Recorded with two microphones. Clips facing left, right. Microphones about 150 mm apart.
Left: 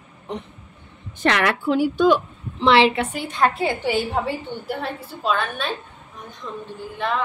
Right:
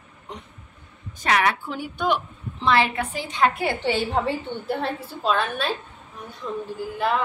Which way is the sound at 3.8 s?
5° left (ahead or behind).